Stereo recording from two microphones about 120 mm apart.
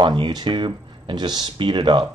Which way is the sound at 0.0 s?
40° right (ahead or behind).